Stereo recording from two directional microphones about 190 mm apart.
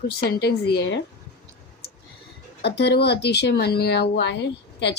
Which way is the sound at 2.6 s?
60° left (ahead or behind).